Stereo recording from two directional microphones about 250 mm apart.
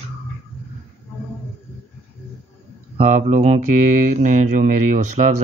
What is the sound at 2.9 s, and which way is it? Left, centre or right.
Speech, right.